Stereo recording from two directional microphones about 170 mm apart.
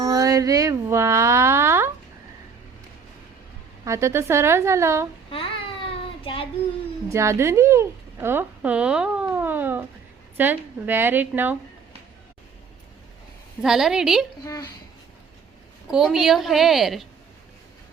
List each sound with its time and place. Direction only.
0.0 s music: 20° right (ahead or behind)
3.8 s a woman's voice: 15° right (ahead or behind)
5.3 s a sound: 30° left (ahead or behind)
7.1 s a woman's voice: 15° right (ahead or behind)
13.6 s a woman's voice: 5° right (ahead or behind)
15.9 s a woman's voice: centre (ahead or behind)